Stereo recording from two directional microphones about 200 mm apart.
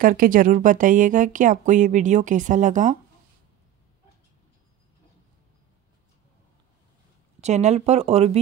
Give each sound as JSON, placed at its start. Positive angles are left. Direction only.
{"t": 0.0, "sound": "speech", "side_deg": -45}
{"t": 7.3, "sound": "speech", "side_deg": -35}